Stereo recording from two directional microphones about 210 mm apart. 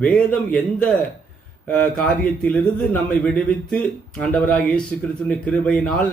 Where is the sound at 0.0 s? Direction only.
5° left (ahead or behind).